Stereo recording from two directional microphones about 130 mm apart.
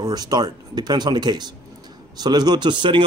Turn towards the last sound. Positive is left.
turn(degrees=-40)  # may be behind; listen again after turning